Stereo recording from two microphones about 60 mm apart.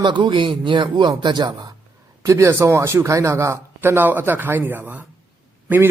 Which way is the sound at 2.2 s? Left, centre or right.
Right.